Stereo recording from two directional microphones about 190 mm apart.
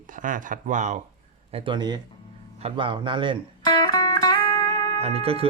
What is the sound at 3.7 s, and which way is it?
Music, 20° left (ahead or behind).